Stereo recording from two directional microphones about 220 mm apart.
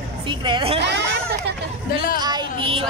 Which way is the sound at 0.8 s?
55° right (ahead or behind).